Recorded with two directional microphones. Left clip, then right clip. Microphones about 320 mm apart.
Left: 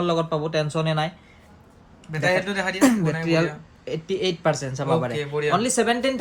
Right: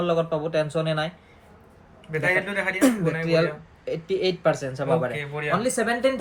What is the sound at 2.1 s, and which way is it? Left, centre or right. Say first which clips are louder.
Speech: left 1 dB; centre.